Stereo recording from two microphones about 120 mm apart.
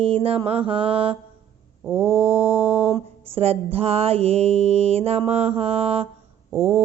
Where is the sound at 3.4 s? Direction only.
55° right (ahead or behind).